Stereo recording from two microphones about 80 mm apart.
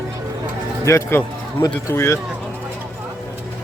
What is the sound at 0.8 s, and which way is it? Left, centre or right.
Speech, left.